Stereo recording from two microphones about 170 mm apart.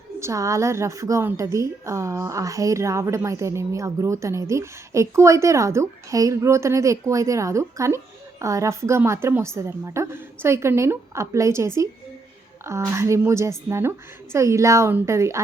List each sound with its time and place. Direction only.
0.2 s a woman's voice: 15° right (ahead or behind)